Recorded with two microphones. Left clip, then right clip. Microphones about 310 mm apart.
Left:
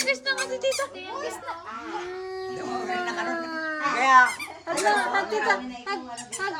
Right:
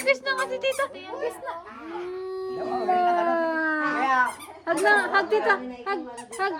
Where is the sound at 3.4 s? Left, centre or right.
Right.